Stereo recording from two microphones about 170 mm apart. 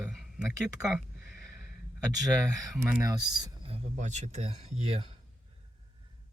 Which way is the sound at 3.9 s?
45° right (ahead or behind).